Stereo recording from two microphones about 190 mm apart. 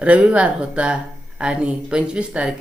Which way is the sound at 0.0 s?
5° right (ahead or behind).